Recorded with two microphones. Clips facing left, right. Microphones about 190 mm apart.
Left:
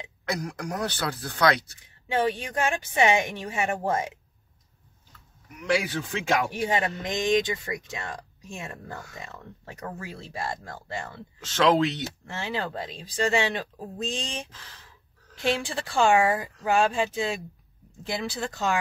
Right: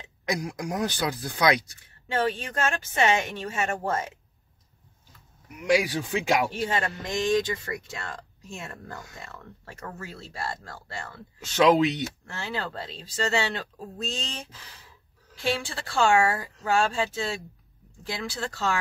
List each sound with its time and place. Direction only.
0.2 s speech: 15° right (ahead or behind)
2.0 s a man's voice: 15° left (ahead or behind)
5.6 s speech: 10° right (ahead or behind)
6.5 s a man's voice: 15° left (ahead or behind)
11.4 s speech: 10° right (ahead or behind)
12.3 s a man's voice: 20° left (ahead or behind)
15.5 s a man's voice: 20° left (ahead or behind)